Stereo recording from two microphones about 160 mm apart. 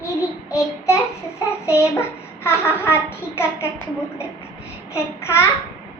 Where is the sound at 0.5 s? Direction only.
20° left (ahead or behind).